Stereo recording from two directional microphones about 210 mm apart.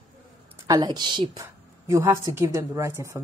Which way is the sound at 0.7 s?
20° right (ahead or behind).